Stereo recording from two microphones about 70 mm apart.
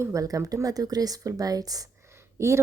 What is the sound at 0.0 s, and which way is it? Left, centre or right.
Speech, right.